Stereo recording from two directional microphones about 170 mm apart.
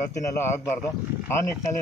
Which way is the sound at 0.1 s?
15° left (ahead or behind).